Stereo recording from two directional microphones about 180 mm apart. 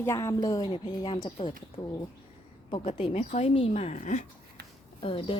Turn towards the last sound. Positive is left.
turn(degrees=30)  # may be behind; listen again after turning